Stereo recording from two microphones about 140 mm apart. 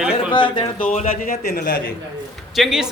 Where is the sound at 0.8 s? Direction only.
70° left (ahead or behind); by 1.8 s 90° left.